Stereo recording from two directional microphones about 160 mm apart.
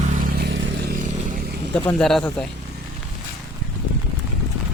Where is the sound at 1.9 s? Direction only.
5° left (ahead or behind).